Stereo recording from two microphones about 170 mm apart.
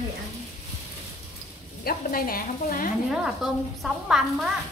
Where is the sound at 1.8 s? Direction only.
60° left (ahead or behind).